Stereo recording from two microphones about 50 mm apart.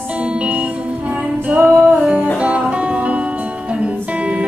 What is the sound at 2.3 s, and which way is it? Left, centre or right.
Music, right.